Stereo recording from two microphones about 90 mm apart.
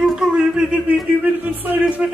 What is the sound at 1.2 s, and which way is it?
Music, 20° right (ahead or behind).